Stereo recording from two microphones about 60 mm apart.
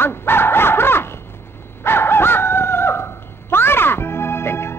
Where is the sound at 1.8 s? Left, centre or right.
Left.